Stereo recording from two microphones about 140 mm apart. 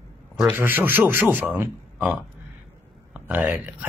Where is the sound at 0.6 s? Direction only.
15° right (ahead or behind).